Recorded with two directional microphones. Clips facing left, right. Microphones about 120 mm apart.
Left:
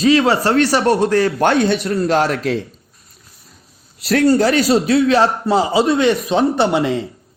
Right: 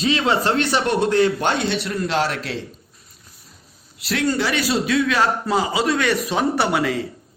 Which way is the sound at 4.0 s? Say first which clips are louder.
Left 8 dB; 40° left (ahead or behind).